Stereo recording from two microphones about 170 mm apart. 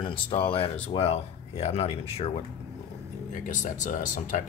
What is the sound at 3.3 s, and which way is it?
Speech, 50° left (ahead or behind).